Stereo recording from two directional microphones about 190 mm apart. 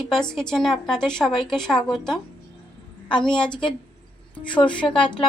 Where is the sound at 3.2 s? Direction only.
5° left (ahead or behind).